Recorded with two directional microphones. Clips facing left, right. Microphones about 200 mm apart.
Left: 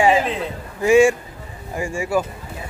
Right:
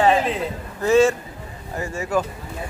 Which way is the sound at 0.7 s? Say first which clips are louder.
Left 2 dB; 10° left (ahead or behind).